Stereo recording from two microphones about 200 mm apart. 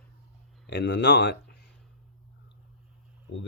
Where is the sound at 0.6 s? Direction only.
60° left (ahead or behind).